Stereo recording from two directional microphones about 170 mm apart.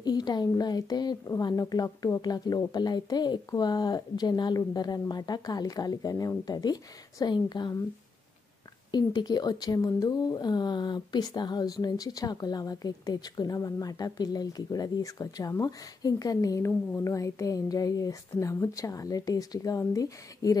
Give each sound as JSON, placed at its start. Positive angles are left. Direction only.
{"t": 0.0, "sound": "speech", "side_deg": 25}
{"t": 8.9, "sound": "speech", "side_deg": 25}